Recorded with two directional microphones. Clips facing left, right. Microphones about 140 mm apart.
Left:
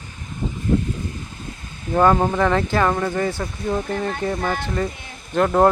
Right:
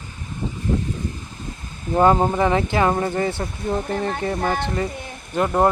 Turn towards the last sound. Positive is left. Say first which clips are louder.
# left 2 dB
turn(degrees=-5)  # may be behind; listen again after turning